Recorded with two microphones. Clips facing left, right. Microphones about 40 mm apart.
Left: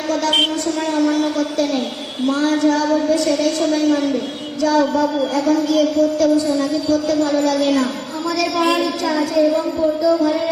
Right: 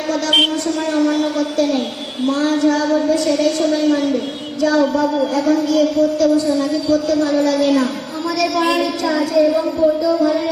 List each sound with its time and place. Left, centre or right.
0.9 s a woman's voice: centre